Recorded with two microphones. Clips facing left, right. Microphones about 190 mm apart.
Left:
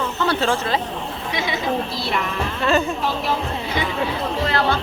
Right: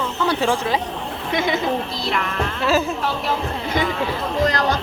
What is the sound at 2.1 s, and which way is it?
Speech, centre (ahead or behind).